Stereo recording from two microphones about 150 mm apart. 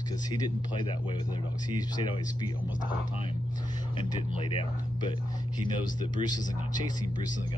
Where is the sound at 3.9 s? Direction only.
35° left (ahead or behind).